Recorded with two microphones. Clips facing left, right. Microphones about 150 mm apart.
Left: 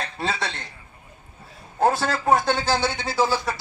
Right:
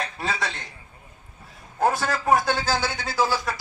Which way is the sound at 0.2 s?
25° left (ahead or behind).